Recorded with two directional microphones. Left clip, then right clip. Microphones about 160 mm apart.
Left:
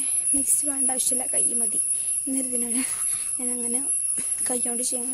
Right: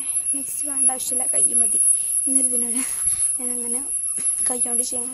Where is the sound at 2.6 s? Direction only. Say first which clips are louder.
Right 1 dB; 20° left (ahead or behind).